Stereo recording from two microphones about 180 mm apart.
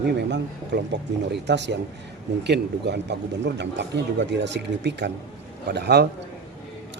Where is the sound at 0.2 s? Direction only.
70° right (ahead or behind).